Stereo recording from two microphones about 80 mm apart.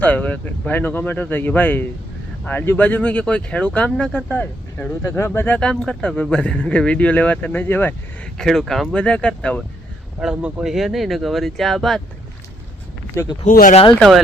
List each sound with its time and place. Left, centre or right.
0.0 s speech: centre
5.0 s speech: left
5.5 s speech: centre
8.4 s speech: centre
10.2 s speech: centre
13.2 s speech: left